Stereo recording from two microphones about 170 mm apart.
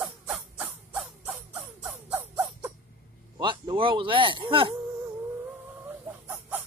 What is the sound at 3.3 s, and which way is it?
A man's voice, 25° right (ahead or behind).